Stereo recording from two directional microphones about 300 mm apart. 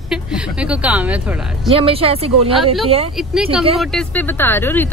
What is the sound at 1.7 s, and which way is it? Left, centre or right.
Speech, centre.